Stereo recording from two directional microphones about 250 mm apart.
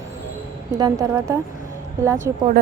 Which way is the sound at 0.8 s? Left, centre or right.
Centre.